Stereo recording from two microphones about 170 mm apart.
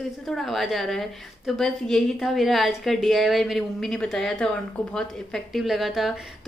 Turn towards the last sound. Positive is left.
turn(degrees=0)  # may be behind; listen again after turning